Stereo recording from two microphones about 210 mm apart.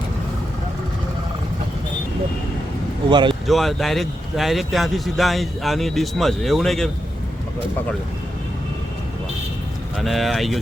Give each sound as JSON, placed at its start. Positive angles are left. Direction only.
{"t": 3.1, "sound": "speech", "side_deg": -20}
{"t": 3.4, "sound": "speech", "side_deg": 0}
{"t": 10.0, "sound": "speech", "side_deg": 0}